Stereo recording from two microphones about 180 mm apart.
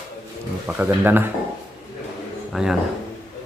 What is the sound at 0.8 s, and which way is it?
Speech, 10° right (ahead or behind).